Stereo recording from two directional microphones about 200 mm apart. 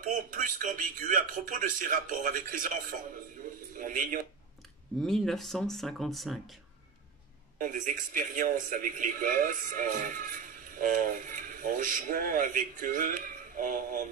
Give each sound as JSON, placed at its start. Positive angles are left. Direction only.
{"t": 0.0, "sound": "a man's voice", "side_deg": -40}
{"t": 5.0, "sound": "speech", "side_deg": 0}
{"t": 7.5, "sound": "a man's voice", "side_deg": -40}